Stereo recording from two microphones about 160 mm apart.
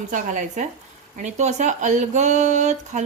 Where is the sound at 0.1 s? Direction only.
55° right (ahead or behind).